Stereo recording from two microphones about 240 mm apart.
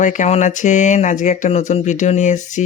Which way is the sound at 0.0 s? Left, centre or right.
Left.